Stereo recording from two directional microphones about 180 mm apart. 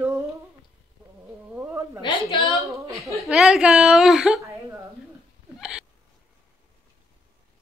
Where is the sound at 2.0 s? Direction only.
25° left (ahead or behind).